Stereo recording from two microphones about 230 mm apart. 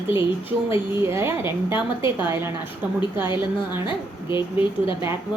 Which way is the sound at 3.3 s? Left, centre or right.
Centre.